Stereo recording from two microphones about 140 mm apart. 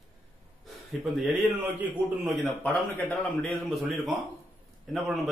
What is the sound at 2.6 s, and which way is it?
Speech, 15° left (ahead or behind).